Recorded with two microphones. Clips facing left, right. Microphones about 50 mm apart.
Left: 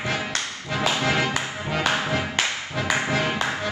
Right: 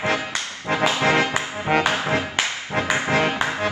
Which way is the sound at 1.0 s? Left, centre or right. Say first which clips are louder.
Right 4 dB; right.